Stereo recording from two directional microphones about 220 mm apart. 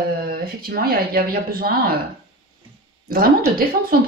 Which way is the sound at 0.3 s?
40° right (ahead or behind).